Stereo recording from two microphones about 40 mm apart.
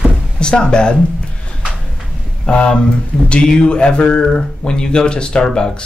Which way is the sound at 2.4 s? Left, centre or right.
Left.